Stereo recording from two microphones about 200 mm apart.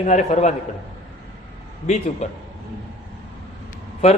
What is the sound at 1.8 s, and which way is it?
Speech, 35° left (ahead or behind).